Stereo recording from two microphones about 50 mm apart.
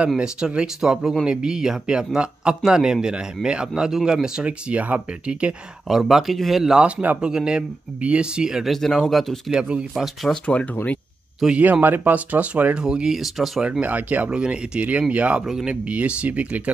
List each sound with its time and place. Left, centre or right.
0.2 s speech: centre
4.4 s speech: right
5.9 s speech: centre
7.2 s speech: centre
8.6 s speech: centre
9.5 s speech: centre
10.4 s speech: left
11.5 s speech: right
12.7 s speech: centre
13.7 s speech: right
15.4 s speech: centre
15.7 s speech: right